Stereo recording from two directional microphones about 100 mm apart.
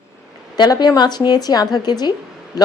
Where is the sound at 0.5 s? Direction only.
45° left (ahead or behind).